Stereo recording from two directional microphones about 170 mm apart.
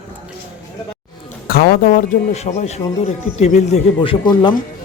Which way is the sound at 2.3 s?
40° left (ahead or behind).